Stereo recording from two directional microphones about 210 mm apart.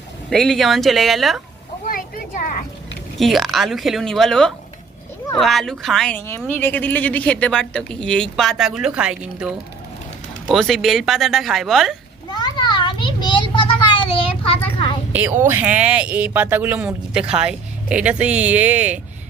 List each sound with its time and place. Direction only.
0.3 s speech: centre (ahead or behind)
1.9 s a sound: 40° left (ahead or behind)
3.2 s speech: centre (ahead or behind)
12.3 s children playing: 20° left (ahead or behind)
15.1 s speech: 10° right (ahead or behind)